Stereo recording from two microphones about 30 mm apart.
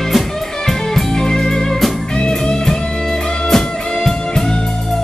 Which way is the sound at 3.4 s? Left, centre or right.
Centre.